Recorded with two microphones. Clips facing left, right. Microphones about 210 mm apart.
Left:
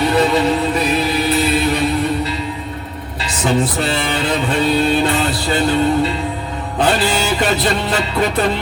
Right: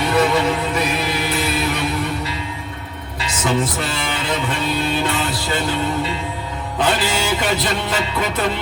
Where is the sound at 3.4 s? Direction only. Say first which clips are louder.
Left 4 dB; 30° left (ahead or behind).